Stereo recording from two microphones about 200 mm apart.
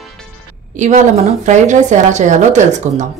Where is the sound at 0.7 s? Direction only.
35° right (ahead or behind).